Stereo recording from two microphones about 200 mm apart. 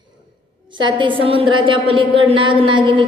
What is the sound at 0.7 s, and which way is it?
A woman's voice, 25° right (ahead or behind).